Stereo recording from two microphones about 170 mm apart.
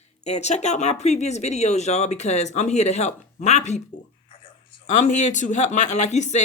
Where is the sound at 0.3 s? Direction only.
40° left (ahead or behind).